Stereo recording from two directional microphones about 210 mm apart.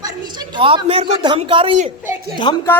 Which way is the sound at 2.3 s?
20° left (ahead or behind).